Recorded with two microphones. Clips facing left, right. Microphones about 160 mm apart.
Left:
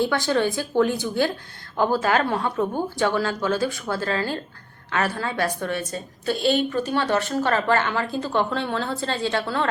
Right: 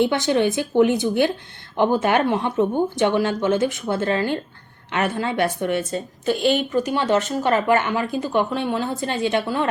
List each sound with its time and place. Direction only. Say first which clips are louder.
0.0 s a woman's voice: right 3 dB; 20° right (ahead or behind)